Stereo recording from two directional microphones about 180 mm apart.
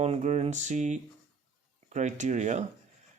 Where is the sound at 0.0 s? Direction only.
40° right (ahead or behind).